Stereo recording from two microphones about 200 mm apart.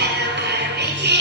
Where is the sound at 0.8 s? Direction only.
55° right (ahead or behind).